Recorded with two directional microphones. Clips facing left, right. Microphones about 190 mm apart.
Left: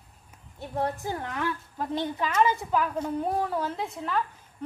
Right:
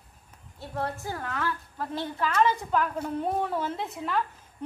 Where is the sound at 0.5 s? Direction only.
15° left (ahead or behind); by 4.2 s centre (ahead or behind).